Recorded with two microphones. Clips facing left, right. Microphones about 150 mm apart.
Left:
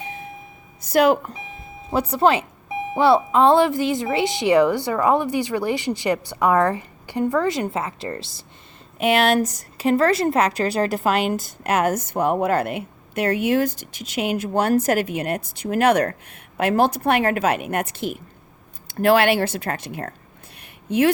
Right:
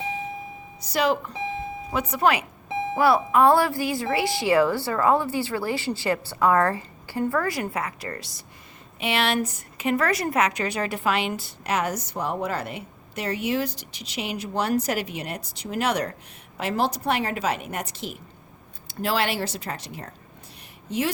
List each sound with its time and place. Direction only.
0.8 s speech: 50° left (ahead or behind)
1.9 s a woman's voice: 35° left (ahead or behind)
9.0 s a woman's voice: 45° left (ahead or behind)